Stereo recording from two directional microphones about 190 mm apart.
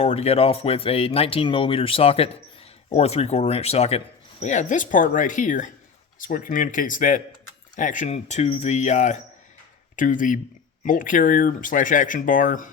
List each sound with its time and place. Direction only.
0.0 s speech: 35° left (ahead or behind)